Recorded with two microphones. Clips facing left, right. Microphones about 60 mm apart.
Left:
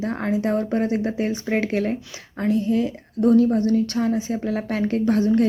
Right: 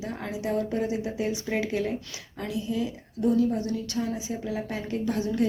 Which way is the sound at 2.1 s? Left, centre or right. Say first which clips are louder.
Left 10 dB; left.